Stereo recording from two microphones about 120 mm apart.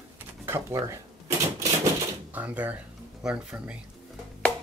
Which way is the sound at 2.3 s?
15° right (ahead or behind).